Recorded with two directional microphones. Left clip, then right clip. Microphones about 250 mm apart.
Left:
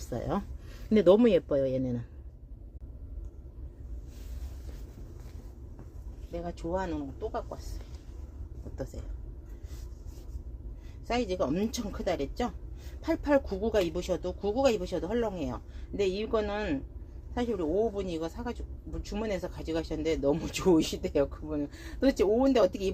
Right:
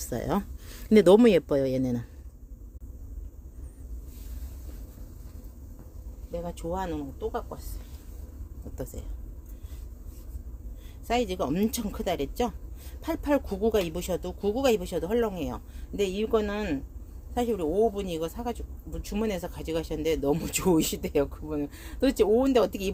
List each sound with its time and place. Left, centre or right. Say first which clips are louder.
0.1 s speech: right 3 dB; right
6.3 s speech: right 1 dB; right
11.1 s speech: right 2 dB; right